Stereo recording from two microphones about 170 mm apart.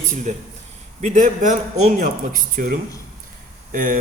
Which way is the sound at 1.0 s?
45° right (ahead or behind).